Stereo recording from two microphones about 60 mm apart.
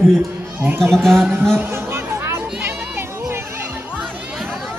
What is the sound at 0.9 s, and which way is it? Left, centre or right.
Speech, centre.